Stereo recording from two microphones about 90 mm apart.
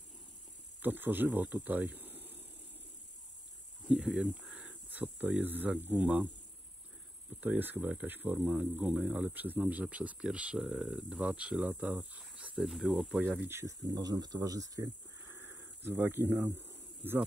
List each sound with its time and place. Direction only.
0.8 s speech: 20° right (ahead or behind)
3.8 s speech: 10° right (ahead or behind)
7.3 s speech: 20° right (ahead or behind)
12.5 s speech: centre (ahead or behind)
13.5 s speech: 30° right (ahead or behind)
13.8 s speech: 50° right (ahead or behind)
15.2 s a sound: 25° right (ahead or behind)